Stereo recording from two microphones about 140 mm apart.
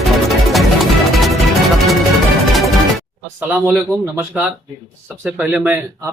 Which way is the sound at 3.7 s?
20° right (ahead or behind).